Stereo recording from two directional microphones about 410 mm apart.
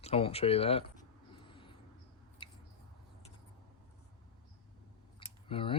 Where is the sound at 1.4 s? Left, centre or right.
Centre.